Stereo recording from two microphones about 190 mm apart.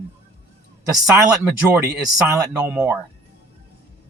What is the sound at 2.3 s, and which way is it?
Speech, 15° right (ahead or behind).